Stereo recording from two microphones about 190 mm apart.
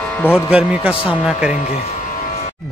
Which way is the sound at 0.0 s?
10° left (ahead or behind).